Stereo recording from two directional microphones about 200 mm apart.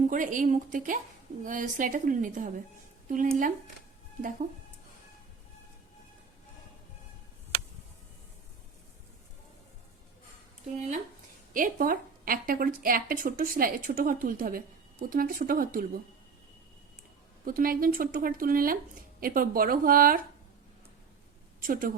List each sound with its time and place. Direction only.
0.1 s a woman's voice: 40° right (ahead or behind)
10.8 s a woman's voice: 35° right (ahead or behind)
17.4 s a woman's voice: 45° right (ahead or behind)
21.6 s a woman's voice: 45° right (ahead or behind)